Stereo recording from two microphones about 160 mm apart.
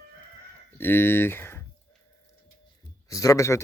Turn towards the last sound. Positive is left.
turn(degrees=20)  # may be behind; listen again after turning